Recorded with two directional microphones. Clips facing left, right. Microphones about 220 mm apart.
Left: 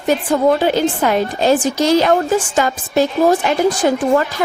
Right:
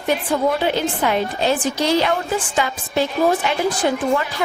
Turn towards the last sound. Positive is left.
turn(degrees=45)  # may be behind; listen again after turning